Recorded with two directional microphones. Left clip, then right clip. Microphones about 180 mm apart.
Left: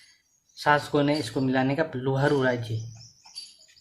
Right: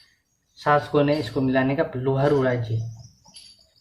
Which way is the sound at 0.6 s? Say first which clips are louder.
Right 3 dB; 40° left (ahead or behind).